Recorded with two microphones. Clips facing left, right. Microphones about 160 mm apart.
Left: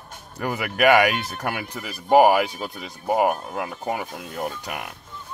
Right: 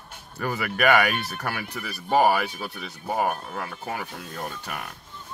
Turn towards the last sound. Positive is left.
turn(degrees=15)  # may be behind; listen again after turning